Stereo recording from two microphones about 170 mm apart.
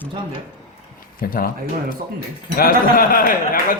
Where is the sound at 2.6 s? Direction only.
55° left (ahead or behind).